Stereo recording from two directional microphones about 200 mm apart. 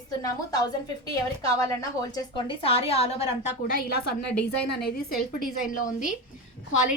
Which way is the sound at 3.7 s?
50° left (ahead or behind).